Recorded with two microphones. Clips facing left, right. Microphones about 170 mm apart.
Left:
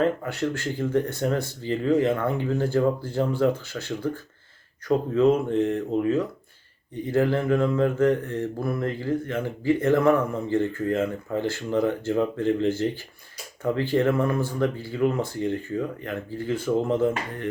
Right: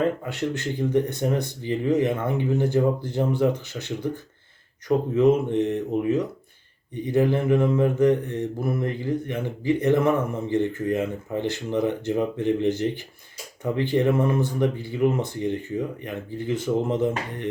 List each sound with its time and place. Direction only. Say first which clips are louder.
0.3 s mantra: even; 20° right (ahead or behind)